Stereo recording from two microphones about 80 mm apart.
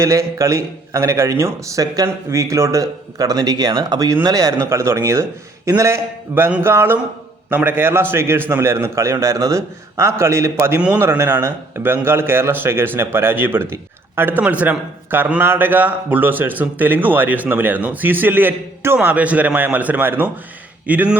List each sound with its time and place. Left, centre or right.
0.0 s a man's voice: right
4.5 s a man's voice: right
10.8 s speech: centre
11.0 s a man's voice: right